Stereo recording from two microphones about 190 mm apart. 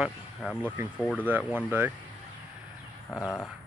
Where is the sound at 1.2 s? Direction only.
10° right (ahead or behind).